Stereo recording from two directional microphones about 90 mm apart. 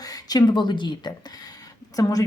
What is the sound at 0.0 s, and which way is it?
Speech, 45° left (ahead or behind).